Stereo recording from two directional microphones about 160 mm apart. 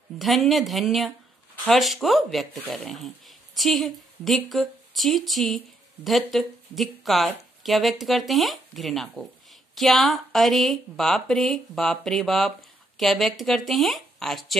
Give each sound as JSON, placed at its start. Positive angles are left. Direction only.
{"t": 0.2, "sound": "speech", "side_deg": 0}